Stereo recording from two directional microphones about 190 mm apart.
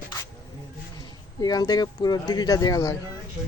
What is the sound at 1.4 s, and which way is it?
Speech, 20° left (ahead or behind).